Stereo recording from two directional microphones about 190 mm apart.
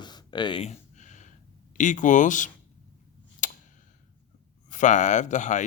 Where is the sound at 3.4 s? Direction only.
45° left (ahead or behind).